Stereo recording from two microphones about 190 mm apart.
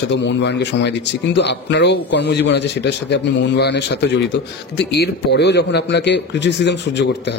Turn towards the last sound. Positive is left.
turn(degrees=65)  # may be behind; listen again after turning